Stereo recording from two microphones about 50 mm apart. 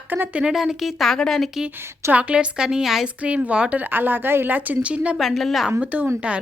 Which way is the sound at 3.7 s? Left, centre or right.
Right.